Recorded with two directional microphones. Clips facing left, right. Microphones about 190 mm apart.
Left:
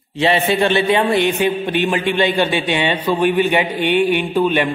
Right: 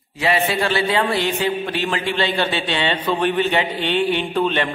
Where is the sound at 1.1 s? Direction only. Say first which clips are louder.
Left 4 dB; 20° left (ahead or behind).